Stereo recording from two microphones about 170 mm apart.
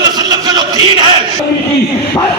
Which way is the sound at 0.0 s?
25° right (ahead or behind).